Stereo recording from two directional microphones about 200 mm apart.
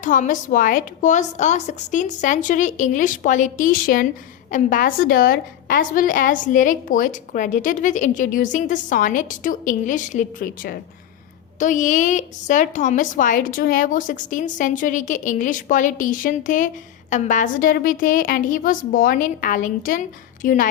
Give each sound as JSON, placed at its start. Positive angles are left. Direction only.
{"t": 0.0, "sound": "a woman's voice", "side_deg": 40}